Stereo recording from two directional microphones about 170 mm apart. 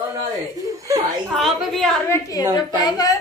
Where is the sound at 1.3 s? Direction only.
Centre (ahead or behind).